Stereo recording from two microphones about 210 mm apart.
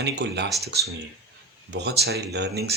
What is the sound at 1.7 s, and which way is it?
Speech, 55° right (ahead or behind).